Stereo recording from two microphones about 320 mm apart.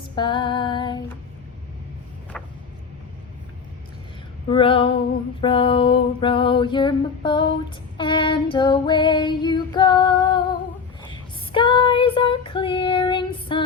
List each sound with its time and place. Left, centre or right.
0.2 s female singing: centre
2.3 s a sound: centre
4.4 s female singing: centre